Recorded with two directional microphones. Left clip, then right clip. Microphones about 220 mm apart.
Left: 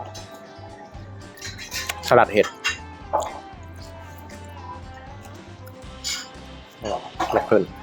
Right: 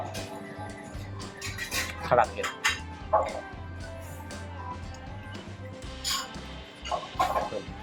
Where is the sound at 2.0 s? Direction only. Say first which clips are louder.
Left 8 dB; 50° left (ahead or behind).